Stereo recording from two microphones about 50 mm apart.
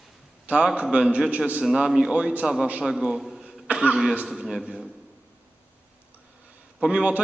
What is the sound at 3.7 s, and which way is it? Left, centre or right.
Speech, right.